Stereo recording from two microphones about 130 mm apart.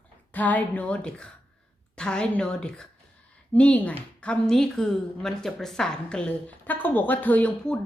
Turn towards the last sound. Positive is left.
turn(degrees=10)  # may be behind; listen again after turning